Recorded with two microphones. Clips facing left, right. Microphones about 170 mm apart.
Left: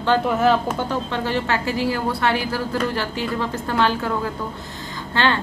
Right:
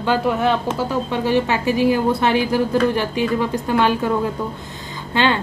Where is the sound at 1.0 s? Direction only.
15° right (ahead or behind).